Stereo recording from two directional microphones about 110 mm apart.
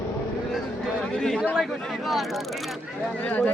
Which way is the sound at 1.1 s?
5° left (ahead or behind).